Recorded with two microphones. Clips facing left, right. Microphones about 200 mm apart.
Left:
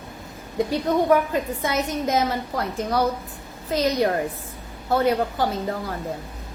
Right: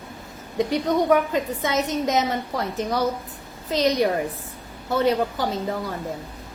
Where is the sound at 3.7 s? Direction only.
20° right (ahead or behind).